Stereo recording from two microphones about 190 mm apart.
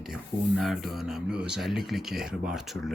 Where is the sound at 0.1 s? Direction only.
Centre (ahead or behind).